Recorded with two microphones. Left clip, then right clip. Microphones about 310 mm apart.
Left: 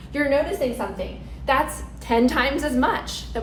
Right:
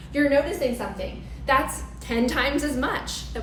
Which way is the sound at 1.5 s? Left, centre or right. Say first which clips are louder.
Left 1 dB; centre.